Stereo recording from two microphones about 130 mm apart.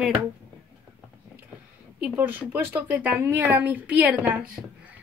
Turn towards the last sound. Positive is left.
turn(degrees=-10)  # may be behind; listen again after turning